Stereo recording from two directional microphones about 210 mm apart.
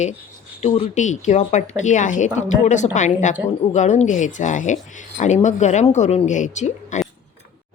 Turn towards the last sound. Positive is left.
turn(degrees=35)  # may be behind; listen again after turning